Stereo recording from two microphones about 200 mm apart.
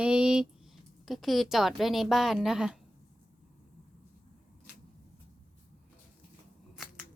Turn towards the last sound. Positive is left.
turn(degrees=0)  # may be behind; listen again after turning